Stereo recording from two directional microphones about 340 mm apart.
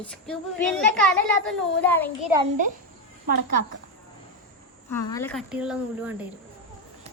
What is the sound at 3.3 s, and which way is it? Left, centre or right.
Speech, right.